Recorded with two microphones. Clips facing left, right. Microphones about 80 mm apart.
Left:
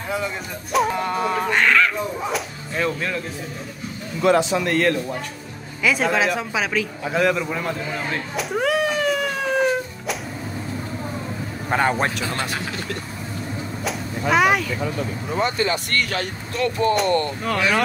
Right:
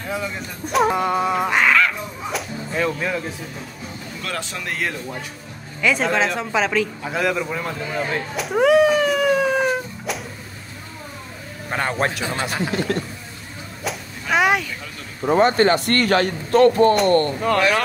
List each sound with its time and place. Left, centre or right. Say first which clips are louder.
0.1 s speech: left 1 dB; centre
4.2 s speech: left 13 dB; centre
4.6 s a man's voice: left 6 dB; centre
11.7 s speech: left 2 dB; centre
12.3 s speech: right 2 dB; centre
14.3 s speech: even; centre
15.2 s speech: right 8 dB; right
16.9 s speech: right 3 dB; centre